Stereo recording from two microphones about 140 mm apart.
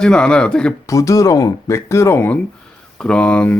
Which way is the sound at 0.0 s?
5° left (ahead or behind).